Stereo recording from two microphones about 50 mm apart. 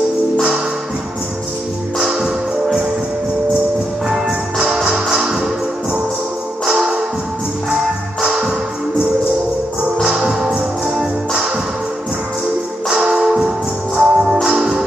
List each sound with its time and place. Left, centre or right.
2.0 s music: centre
4.1 s music: centre
7.7 s music: centre
10.0 s music: centre
12.9 s music: centre